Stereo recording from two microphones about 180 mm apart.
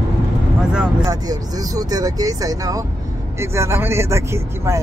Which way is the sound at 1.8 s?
20° right (ahead or behind).